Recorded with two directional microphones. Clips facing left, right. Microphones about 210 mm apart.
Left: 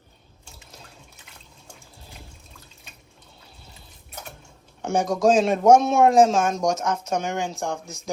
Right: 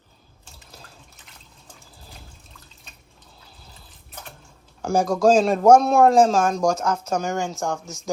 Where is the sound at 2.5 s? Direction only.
Centre (ahead or behind).